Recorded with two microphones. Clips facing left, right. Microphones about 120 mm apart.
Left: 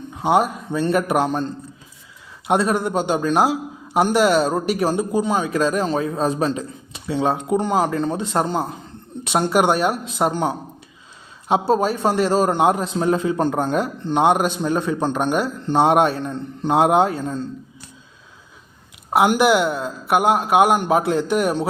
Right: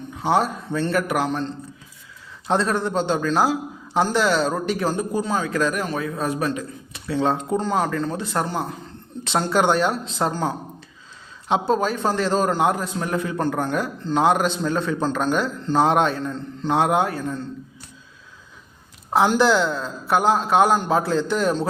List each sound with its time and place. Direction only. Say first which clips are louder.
0.2 s speech: left 3 dB; 15° left (ahead or behind); by 1.5 s 30° left (ahead or behind)
2.5 s speech: left 2 dB; 15° left (ahead or behind)
3.2 s a man's voice: left 2 dB; 25° left (ahead or behind); by 11.7 s 10° left (ahead or behind)
11.7 s a man's voice: left 3 dB; 35° left (ahead or behind)
12.1 s speech: left 4 dB; 10° left (ahead or behind)
12.5 s speech: left 3 dB; 20° left (ahead or behind)
19.1 s speech: left 2 dB; 15° left (ahead or behind)